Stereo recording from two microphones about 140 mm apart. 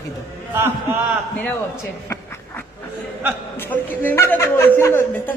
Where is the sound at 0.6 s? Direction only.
15° right (ahead or behind).